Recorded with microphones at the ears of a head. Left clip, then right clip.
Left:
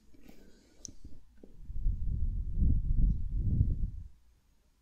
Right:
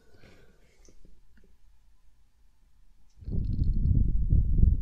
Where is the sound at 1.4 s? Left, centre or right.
Left.